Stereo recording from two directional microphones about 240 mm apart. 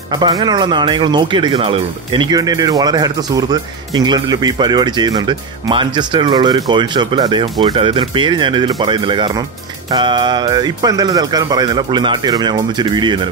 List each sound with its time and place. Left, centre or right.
0.2 s speech: centre